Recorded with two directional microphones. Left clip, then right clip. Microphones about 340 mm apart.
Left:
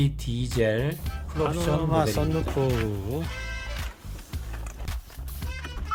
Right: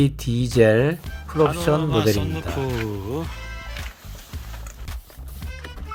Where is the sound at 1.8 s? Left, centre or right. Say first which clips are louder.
Right 4 dB; centre.